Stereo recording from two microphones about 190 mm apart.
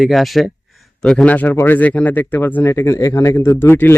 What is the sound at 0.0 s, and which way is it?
Speech, centre (ahead or behind).